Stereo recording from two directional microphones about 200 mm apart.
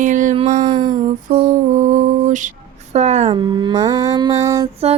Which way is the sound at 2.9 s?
35° right (ahead or behind).